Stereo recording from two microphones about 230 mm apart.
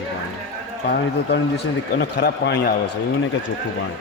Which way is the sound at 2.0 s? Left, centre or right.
Left.